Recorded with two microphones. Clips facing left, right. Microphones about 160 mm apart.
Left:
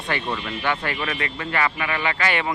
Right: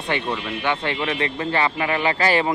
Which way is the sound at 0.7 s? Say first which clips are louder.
Right 2 dB; 25° right (ahead or behind).